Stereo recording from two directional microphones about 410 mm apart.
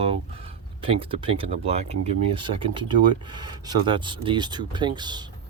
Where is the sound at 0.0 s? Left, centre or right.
Centre.